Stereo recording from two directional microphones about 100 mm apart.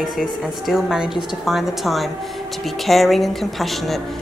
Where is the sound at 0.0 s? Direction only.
Centre (ahead or behind).